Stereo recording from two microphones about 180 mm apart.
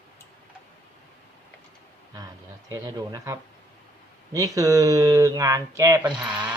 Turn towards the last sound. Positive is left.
turn(degrees=-10)  # may be behind; listen again after turning